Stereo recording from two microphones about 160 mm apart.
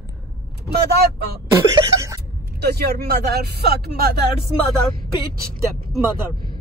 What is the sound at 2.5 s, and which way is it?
Speech, 85° right.